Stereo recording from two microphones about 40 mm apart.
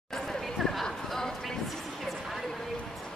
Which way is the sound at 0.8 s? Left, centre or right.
Centre.